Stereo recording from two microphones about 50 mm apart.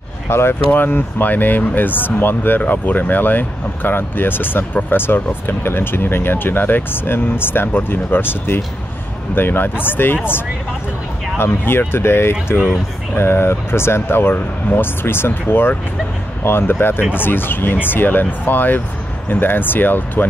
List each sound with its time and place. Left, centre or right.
0.3 s speech: left
0.7 s speech: left
15.0 s speech: left